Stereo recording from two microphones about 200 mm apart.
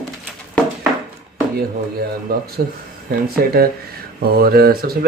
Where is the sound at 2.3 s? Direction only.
50° right (ahead or behind).